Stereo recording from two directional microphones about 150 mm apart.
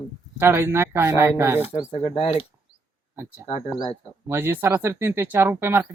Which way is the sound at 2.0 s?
40° left (ahead or behind).